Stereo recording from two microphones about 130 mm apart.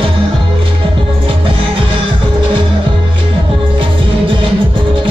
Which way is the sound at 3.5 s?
40° right (ahead or behind).